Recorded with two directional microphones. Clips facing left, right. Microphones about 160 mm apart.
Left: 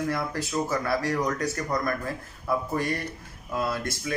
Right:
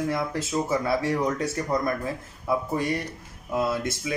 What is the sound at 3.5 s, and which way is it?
Speech, 20° right (ahead or behind).